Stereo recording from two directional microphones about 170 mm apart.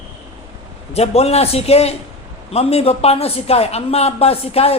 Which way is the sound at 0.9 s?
35° left (ahead or behind).